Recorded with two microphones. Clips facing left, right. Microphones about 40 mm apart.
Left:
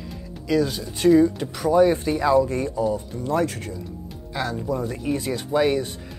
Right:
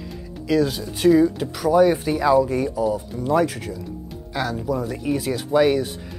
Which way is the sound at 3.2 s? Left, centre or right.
Centre.